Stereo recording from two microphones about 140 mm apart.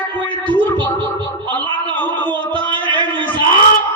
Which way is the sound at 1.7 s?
10° left (ahead or behind).